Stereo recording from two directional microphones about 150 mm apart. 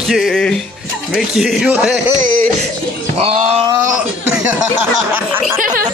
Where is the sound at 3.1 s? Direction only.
45° right (ahead or behind).